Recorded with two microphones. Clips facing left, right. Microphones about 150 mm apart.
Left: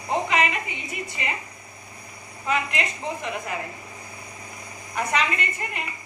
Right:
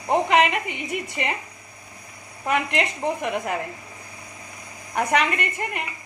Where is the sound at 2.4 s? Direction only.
65° right (ahead or behind).